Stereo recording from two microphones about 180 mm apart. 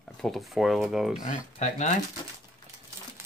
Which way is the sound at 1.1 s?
40° left (ahead or behind).